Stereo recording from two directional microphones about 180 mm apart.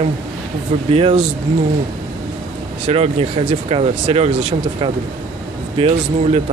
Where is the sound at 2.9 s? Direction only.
35° right (ahead or behind).